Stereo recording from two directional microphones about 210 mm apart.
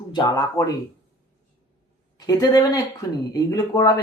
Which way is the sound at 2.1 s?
20° left (ahead or behind).